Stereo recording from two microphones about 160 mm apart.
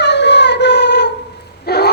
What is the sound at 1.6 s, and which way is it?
Dog, 90° left.